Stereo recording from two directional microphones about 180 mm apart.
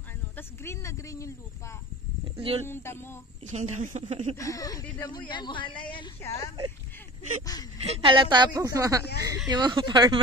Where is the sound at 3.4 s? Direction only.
40° right (ahead or behind).